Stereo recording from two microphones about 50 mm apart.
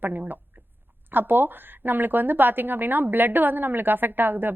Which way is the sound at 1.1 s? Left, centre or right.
Right.